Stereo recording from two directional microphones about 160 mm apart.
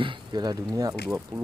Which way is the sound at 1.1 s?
10° right (ahead or behind).